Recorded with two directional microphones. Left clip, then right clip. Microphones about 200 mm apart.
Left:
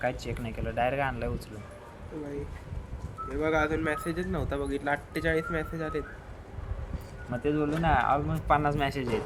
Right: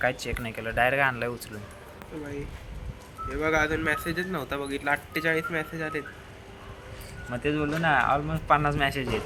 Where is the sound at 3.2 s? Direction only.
15° left (ahead or behind).